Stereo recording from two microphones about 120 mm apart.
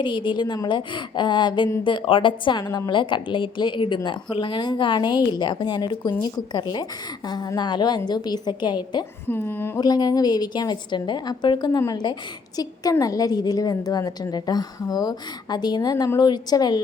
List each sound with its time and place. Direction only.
0.0 s a woman's voice: 40° left (ahead or behind)
9.2 s speech: 20° left (ahead or behind)
9.7 s a woman's voice: 35° left (ahead or behind)